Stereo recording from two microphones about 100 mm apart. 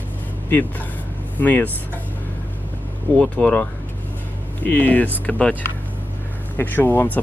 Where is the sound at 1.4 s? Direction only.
15° left (ahead or behind).